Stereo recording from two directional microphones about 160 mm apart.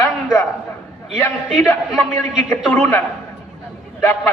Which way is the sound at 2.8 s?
15° left (ahead or behind).